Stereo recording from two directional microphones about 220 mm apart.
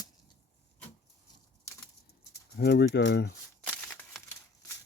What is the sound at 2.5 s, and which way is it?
Speech, 50° left (ahead or behind).